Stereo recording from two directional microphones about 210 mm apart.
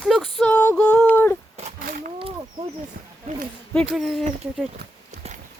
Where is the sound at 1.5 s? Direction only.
35° right (ahead or behind).